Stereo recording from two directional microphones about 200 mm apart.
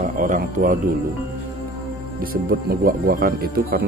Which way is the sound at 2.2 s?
45° right (ahead or behind).